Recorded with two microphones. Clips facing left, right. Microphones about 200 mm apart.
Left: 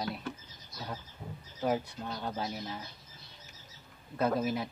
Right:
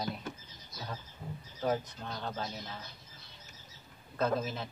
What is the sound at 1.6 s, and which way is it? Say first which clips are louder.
Speech: left 1 dB; 10° left (ahead or behind).